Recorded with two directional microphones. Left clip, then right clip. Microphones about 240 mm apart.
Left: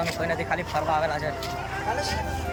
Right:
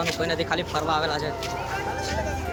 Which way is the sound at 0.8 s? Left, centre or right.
Centre.